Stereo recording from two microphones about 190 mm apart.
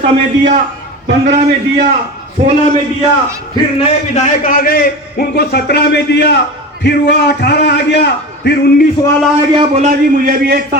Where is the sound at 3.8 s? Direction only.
40° left (ahead or behind); by 8.8 s 60° left (ahead or behind).